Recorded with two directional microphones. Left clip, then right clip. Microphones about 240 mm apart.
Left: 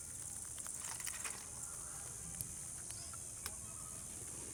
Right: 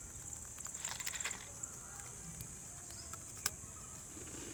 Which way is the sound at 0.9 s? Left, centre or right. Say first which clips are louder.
Right 5 dB; centre.